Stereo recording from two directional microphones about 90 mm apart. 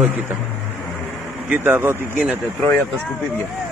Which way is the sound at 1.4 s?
25° right (ahead or behind).